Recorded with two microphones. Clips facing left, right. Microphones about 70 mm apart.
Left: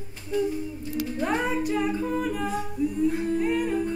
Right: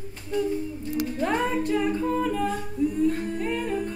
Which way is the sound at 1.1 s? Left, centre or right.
Centre.